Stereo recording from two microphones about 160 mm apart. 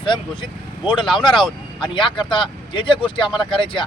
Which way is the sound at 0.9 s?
30° left (ahead or behind).